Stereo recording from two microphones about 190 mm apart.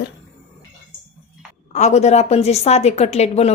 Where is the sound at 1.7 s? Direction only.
35° left (ahead or behind).